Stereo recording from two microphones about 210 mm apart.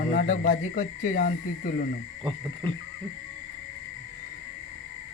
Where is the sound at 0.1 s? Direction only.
40° left (ahead or behind).